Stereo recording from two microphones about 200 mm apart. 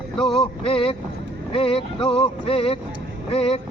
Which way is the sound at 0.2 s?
Centre (ahead or behind).